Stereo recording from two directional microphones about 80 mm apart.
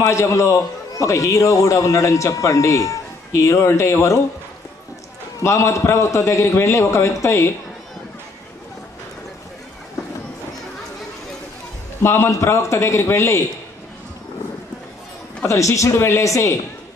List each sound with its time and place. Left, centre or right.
0.0 s a man's voice: left
5.4 s a man's voice: left
12.0 s a man's voice: left
15.4 s a man's voice: left